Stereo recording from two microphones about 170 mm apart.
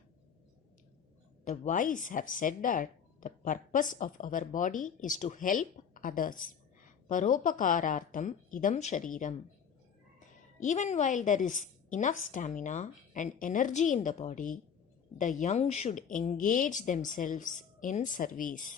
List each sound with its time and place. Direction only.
1.5 s speech: 50° left (ahead or behind)
10.6 s speech: 45° left (ahead or behind)